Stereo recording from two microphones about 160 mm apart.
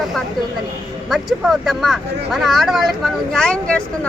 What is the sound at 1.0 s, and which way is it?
Speech, centre (ahead or behind).